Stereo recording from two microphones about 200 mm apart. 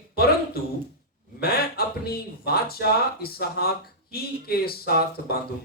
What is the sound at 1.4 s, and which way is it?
Speech, 50° left (ahead or behind).